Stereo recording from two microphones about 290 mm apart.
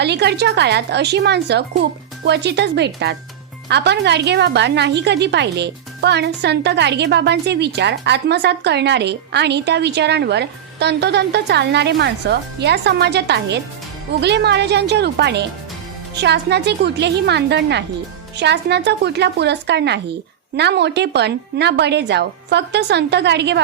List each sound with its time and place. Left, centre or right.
0.0 s a woman's voice: right